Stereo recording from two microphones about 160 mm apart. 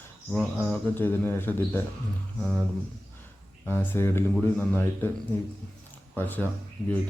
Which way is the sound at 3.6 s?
10° left (ahead or behind).